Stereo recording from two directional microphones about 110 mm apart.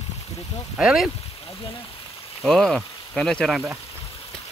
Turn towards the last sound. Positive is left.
turn(degrees=0)  # may be behind; listen again after turning